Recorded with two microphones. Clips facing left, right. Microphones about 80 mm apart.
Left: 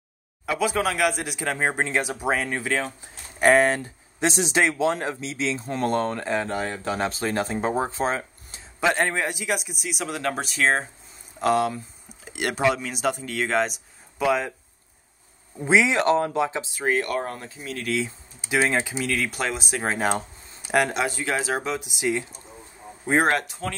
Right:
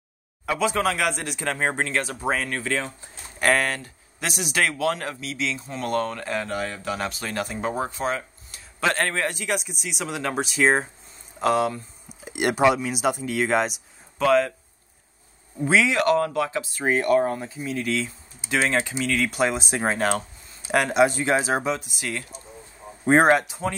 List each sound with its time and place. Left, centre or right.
0.5 s speech: centre; by 8.6 s left
8.8 s a man's voice: centre
12.3 s speech: centre
14.1 s speech: centre
15.6 s speech: left
16.8 s a man's voice: centre
18.0 s a man's voice: centre
19.5 s speech: right
20.0 s a sound: centre
20.7 s a man's voice: centre
21.0 s speech: right
22.0 s speech: centre
23.6 s speech: centre